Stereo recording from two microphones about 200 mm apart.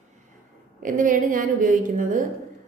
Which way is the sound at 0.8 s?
40° right (ahead or behind).